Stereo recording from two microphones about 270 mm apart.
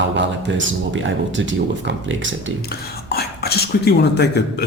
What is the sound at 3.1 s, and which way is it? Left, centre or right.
Speech, left.